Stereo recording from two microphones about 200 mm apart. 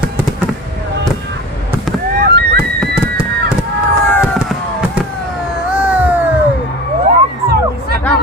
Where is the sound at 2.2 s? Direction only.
50° right (ahead or behind).